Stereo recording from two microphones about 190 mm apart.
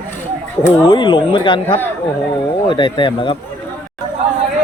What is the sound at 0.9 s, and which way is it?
Speech, 25° left (ahead or behind).